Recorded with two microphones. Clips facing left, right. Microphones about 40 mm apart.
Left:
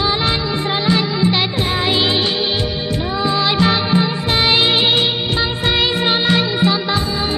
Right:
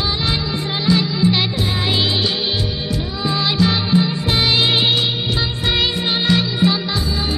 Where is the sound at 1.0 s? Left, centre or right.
Left.